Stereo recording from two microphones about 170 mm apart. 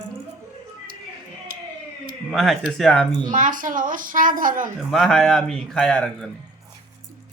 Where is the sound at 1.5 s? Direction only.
60° right (ahead or behind).